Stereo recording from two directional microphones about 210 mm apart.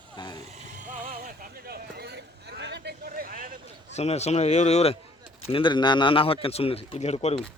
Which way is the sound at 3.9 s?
30° left (ahead or behind).